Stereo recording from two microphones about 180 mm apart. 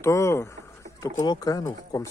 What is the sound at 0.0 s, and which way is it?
Speech, 15° left (ahead or behind).